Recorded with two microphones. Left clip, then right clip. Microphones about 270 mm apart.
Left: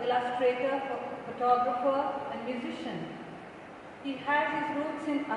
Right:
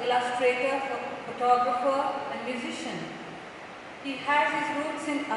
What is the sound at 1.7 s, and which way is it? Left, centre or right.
Speech, left.